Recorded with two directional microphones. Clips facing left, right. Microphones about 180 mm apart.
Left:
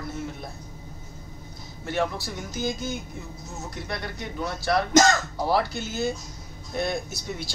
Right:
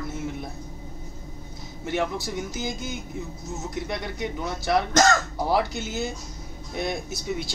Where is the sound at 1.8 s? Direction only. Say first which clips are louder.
Even; 20° right (ahead or behind).